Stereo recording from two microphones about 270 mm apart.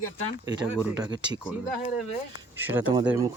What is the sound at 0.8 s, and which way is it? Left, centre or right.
Speech, centre.